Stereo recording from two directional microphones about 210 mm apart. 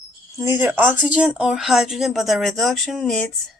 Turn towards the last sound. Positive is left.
turn(degrees=0)  # may be behind; listen again after turning